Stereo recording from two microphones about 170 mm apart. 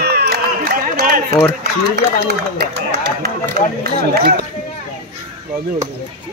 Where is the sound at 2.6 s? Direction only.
70° right (ahead or behind).